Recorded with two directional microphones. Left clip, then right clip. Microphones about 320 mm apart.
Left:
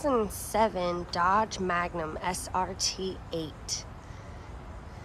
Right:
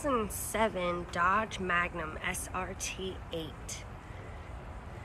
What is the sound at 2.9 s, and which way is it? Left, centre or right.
Speech, left.